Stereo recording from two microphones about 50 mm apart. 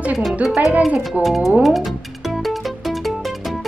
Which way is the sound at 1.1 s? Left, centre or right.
Centre.